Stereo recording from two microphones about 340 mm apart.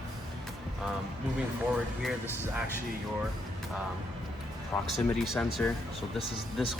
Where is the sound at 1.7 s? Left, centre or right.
Centre.